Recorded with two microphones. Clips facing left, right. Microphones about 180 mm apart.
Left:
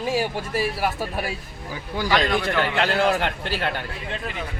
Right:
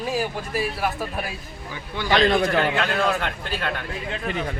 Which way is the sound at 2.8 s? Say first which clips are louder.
Left 2 dB; 30° left (ahead or behind).